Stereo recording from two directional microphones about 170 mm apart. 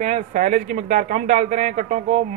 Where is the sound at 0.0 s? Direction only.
45° right (ahead or behind).